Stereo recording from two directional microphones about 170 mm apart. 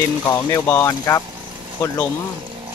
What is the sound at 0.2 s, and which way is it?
Speech, 20° left (ahead or behind).